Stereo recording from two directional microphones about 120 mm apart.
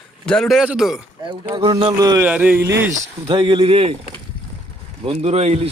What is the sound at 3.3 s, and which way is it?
Speech, 45° right (ahead or behind).